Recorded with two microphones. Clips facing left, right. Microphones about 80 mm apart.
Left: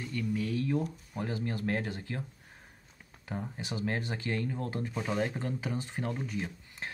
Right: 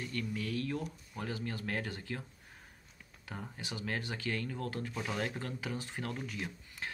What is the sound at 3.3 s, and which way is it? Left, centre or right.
Speech, left.